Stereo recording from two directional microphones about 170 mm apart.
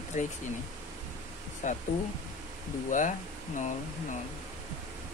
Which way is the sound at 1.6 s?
45° left (ahead or behind).